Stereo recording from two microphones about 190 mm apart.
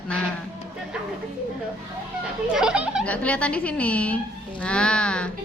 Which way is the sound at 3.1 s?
5° left (ahead or behind).